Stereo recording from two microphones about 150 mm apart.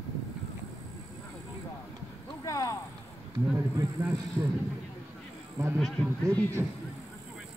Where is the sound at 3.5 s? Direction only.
15° right (ahead or behind).